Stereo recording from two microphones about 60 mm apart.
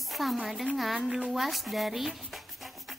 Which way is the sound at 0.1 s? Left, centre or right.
Centre.